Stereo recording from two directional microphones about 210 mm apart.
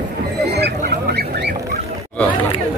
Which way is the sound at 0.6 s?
50° right (ahead or behind).